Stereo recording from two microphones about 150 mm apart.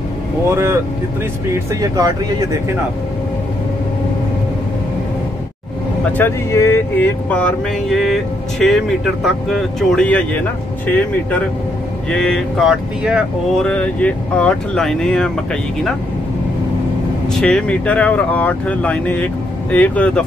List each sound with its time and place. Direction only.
0.5 s speech: 20° right (ahead or behind)
6.0 s speech: 15° left (ahead or behind); by 13.7 s 5° right (ahead or behind)
13.7 s speech: 10° left (ahead or behind)
17.3 s speech: 5° left (ahead or behind)